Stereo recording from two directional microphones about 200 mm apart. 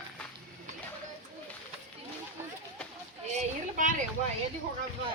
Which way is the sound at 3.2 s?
35° right (ahead or behind).